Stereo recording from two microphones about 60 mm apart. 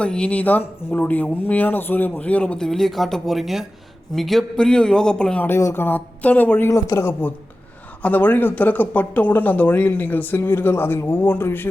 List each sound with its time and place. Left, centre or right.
0.0 s a man's voice: centre
5.7 s speech: left
6.7 s speech: left
7.0 s a woman's voice: left
8.0 s speech: left